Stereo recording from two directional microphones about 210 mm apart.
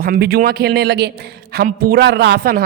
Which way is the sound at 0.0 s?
45° right (ahead or behind).